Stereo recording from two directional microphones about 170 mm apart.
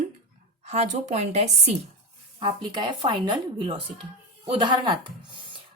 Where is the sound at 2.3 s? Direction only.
30° right (ahead or behind).